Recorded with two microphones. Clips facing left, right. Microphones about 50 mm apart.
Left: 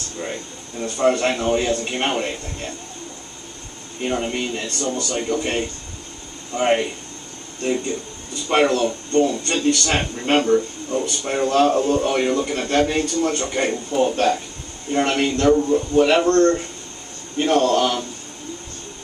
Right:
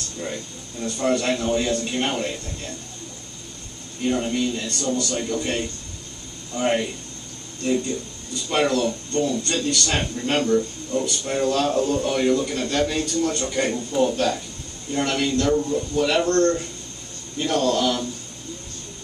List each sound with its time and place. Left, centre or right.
0.2 s speech: left
4.0 s speech: left